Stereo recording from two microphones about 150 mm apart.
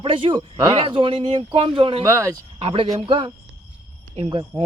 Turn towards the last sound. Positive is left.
turn(degrees=-30)  # may be behind; listen again after turning